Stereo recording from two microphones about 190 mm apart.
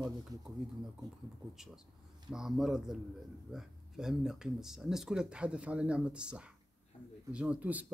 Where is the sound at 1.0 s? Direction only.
20° right (ahead or behind).